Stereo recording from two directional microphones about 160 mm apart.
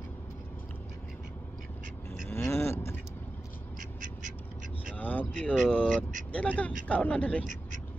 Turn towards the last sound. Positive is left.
turn(degrees=10)  # may be behind; listen again after turning